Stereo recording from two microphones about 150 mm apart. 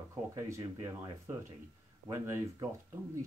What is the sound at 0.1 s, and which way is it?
Speech, 20° right (ahead or behind).